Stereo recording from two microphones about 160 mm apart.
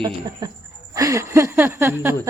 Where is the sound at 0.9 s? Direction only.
20° right (ahead or behind).